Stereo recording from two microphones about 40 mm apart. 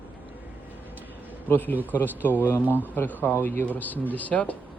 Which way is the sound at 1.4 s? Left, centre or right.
Left.